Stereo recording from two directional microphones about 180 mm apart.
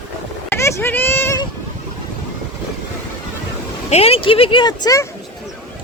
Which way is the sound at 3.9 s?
35° left (ahead or behind).